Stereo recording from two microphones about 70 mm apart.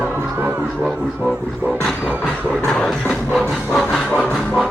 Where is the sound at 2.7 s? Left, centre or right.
Centre.